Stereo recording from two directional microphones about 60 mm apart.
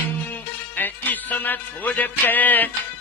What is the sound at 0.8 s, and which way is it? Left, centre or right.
Music, left.